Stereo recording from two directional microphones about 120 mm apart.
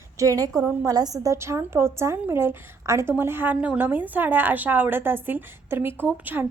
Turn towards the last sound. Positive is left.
turn(degrees=-15)  # may be behind; listen again after turning